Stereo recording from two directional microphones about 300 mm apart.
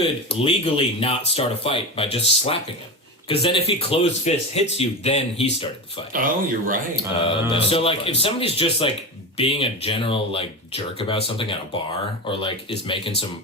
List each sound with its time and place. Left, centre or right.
0.3 s speech: centre
6.1 s speech: right
7.2 s speech: centre